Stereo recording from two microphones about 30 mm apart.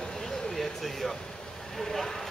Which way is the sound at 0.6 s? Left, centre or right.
Centre.